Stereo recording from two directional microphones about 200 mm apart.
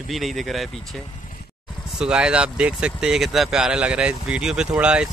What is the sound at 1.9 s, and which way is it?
Speech, 5° right (ahead or behind).